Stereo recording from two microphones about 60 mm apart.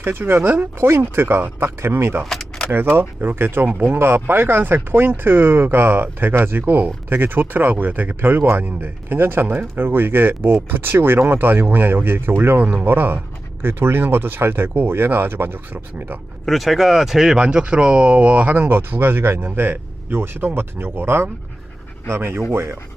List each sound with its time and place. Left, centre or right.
0.0 s speech: right
0.9 s speech: right
2.3 s keys jangling: centre
2.9 s speech: right
16.5 s speech: centre
17.3 s speech: centre
18.5 s speech: right